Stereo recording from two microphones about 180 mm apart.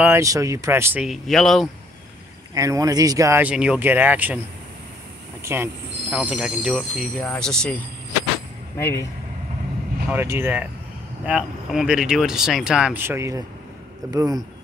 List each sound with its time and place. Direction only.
0.0 s speech: 15° right (ahead or behind)
1.0 s speech: centre (ahead or behind)
2.5 s speech: 20° right (ahead or behind)
5.4 s speech: 10° right (ahead or behind); by 7.8 s 5° left (ahead or behind)
8.7 s speech: 15° left (ahead or behind)
10.1 s speech: 15° right (ahead or behind)